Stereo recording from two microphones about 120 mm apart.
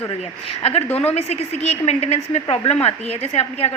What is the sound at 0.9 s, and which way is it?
Speech, 15° left (ahead or behind).